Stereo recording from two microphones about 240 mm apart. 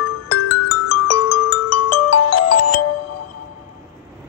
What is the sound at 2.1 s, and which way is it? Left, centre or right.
Music, left.